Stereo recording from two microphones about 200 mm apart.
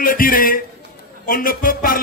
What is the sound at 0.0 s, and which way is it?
Speech, 45° left (ahead or behind).